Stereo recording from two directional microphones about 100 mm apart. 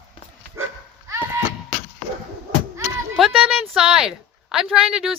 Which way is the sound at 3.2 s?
5° right (ahead or behind).